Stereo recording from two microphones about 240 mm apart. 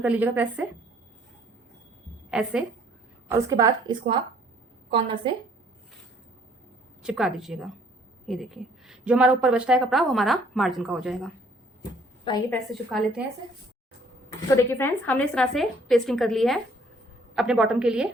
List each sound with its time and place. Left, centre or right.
0.0 s a woman's voice: centre
2.3 s a woman's voice: centre; by 5.3 s right
7.0 s a woman's voice: centre
12.5 s a woman's voice: centre
14.5 s a woman's voice: centre